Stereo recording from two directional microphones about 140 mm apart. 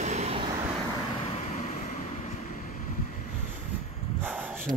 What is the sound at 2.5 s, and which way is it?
Vehicle, 70° left (ahead or behind).